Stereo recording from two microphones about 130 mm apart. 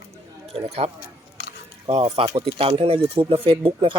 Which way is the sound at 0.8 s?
55° right (ahead or behind).